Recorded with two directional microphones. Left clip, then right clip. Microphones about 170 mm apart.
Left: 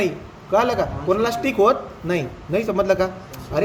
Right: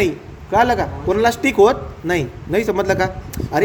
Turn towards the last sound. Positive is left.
turn(degrees=-45)  # may be behind; listen again after turning